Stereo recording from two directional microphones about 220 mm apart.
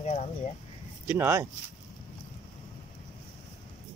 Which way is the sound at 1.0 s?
10° right (ahead or behind).